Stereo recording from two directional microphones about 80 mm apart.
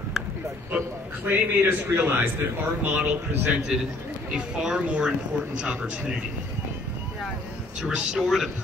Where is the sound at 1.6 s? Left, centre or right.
Right.